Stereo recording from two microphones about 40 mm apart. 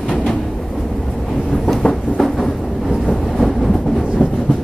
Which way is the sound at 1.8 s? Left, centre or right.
Left.